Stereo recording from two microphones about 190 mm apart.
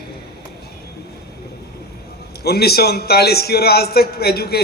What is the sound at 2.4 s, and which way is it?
A man's voice, 55° left (ahead or behind).